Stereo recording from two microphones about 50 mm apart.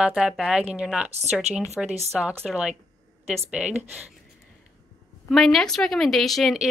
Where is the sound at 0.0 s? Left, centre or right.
Centre.